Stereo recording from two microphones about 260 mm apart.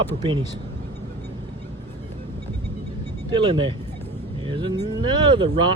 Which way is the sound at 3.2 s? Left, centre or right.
Centre.